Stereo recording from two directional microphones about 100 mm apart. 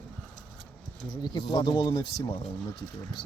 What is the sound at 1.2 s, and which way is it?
Speech, 50° left (ahead or behind).